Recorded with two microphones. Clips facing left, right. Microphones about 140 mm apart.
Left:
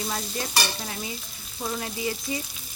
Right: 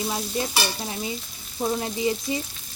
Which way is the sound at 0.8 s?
25° right (ahead or behind).